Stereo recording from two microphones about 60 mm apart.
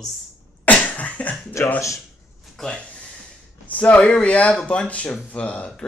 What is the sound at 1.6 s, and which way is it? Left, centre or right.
Speech, left.